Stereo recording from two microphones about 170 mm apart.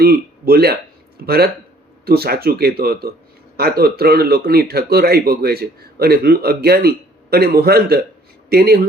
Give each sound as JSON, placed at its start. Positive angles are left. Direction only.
{"t": 0.0, "sound": "speech", "side_deg": -65}